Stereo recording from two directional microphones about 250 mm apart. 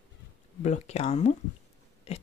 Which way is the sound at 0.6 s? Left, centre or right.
Left.